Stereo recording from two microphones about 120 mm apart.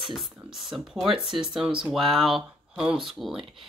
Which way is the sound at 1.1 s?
45° right (ahead or behind).